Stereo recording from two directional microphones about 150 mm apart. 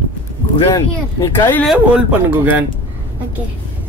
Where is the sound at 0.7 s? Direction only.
20° left (ahead or behind).